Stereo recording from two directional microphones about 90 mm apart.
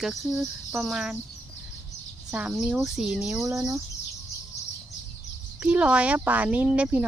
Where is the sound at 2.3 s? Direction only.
15° right (ahead or behind).